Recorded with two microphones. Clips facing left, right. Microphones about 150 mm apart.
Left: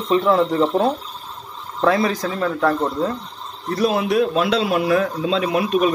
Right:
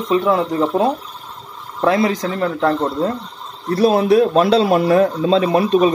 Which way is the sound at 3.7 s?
35° right (ahead or behind).